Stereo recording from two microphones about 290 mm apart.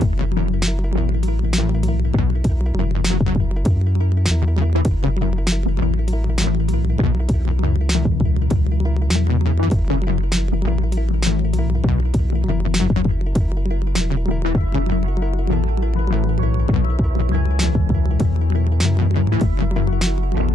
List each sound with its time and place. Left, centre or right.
1.5 s music: centre
7.9 s music: centre
12.7 s music: centre
17.6 s music: centre